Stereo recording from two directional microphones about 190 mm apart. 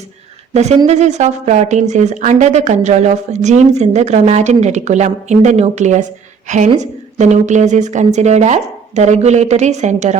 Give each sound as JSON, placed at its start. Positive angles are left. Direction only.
{"t": 0.5, "sound": "a woman's voice", "side_deg": -35}